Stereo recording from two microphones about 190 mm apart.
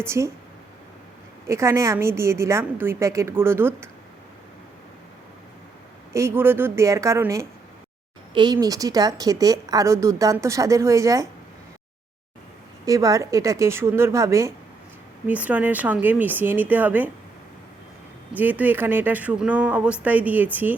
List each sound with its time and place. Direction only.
0.0 s a woman's voice: 15° right (ahead or behind)
1.5 s a woman's voice: 15° right (ahead or behind)
6.1 s a woman's voice: 15° right (ahead or behind)
12.8 s a woman's voice: 20° right (ahead or behind)
18.3 s a woman's voice: 10° right (ahead or behind)